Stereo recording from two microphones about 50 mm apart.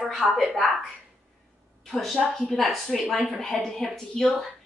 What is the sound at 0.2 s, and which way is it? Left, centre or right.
Speech, right.